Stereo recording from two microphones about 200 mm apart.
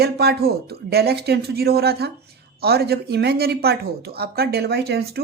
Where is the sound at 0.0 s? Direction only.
50° right (ahead or behind).